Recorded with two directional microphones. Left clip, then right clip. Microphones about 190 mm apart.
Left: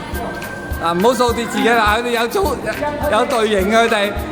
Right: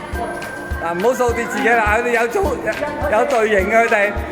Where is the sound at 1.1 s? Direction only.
10° left (ahead or behind).